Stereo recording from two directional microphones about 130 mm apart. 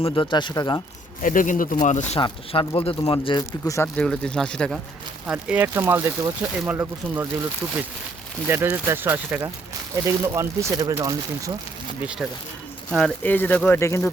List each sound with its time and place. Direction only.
0.1 s speech: 35° left (ahead or behind)
1.2 s speech: 90° left; by 2.0 s 70° left (ahead or behind)
2.1 s speech: 40° left (ahead or behind)
3.9 s speech: 5° left (ahead or behind)
5.2 s speech: 10° right (ahead or behind); by 11.5 s 25° right (ahead or behind)
12.2 s speech: 5° right (ahead or behind)
13.0 s speech: 15° left (ahead or behind)